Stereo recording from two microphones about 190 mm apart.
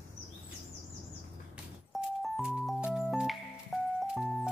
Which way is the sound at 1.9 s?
Centre (ahead or behind).